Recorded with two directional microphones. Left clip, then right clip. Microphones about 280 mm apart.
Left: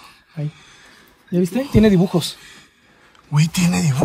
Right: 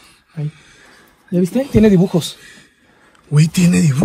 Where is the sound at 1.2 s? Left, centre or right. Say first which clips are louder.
Right 3 dB; centre.